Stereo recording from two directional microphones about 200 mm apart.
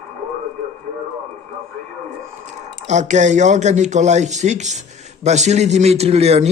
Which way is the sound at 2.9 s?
35° right (ahead or behind).